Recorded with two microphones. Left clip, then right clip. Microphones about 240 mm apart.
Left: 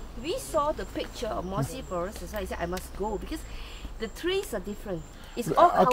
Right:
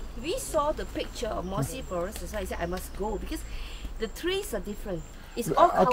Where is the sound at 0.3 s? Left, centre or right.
Centre.